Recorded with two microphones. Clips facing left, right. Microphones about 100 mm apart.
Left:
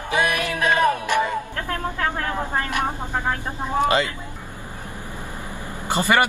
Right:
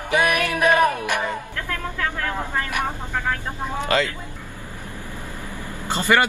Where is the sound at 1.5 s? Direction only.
40° left (ahead or behind).